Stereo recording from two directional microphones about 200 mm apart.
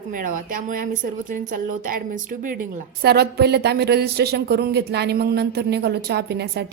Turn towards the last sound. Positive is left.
turn(degrees=-55)  # may be behind; listen again after turning